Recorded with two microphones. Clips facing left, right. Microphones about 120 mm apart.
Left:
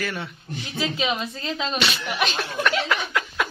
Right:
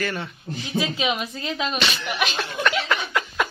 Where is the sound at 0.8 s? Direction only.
15° right (ahead or behind).